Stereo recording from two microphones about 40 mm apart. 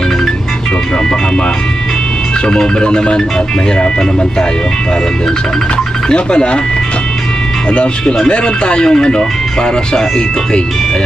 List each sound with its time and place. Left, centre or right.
2.5 s speech: centre
6.1 s speech: left
7.7 s speech: left